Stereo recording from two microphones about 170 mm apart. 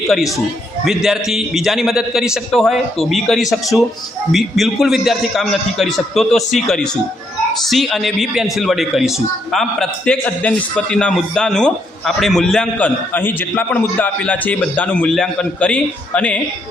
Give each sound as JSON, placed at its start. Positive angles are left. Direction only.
{"t": 0.9, "sound": "a man's voice", "side_deg": 0}